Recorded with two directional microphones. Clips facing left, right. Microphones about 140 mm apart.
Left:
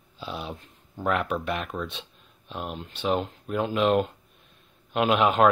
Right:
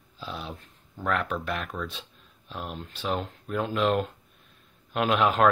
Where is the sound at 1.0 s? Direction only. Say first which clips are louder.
Left 2 dB; 5° left (ahead or behind).